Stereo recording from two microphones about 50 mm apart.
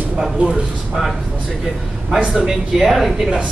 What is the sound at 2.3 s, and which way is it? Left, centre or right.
Speech, centre.